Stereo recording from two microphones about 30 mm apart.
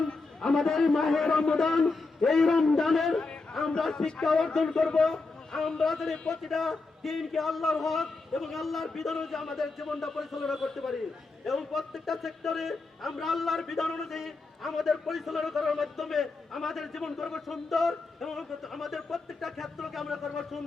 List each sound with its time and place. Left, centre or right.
0.0 s a sound: left
0.9 s a man's voice: centre
4.9 s a sound: centre
5.5 s a man's voice: centre
17.0 s a man's voice: centre
17.4 s a man's voice: centre